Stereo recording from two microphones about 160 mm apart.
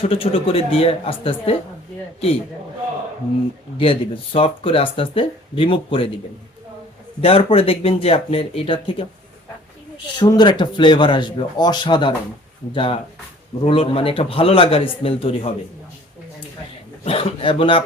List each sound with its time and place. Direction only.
0.0 s speech: 35° left (ahead or behind)
3.8 s speech: 35° left (ahead or behind)
7.2 s speech: 35° left (ahead or behind)
10.2 s a man's voice: 30° left (ahead or behind)
17.0 s speech: 35° left (ahead or behind)